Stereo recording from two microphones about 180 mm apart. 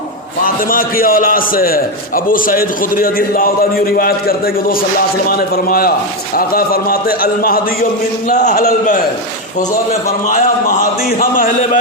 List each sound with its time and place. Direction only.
0.4 s a man's voice: 50° left (ahead or behind)
8.3 s a man's voice: 45° left (ahead or behind)